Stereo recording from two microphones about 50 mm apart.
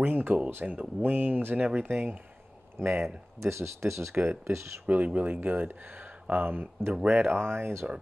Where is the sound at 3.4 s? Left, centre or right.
Right.